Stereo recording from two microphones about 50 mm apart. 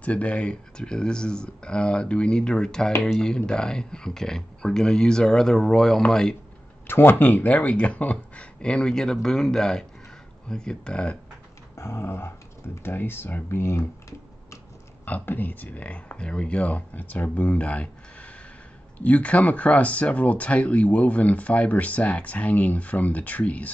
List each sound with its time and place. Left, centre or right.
0.0 s speech: left
6.9 s speech: left
11.7 s speech: left
15.0 s speech: left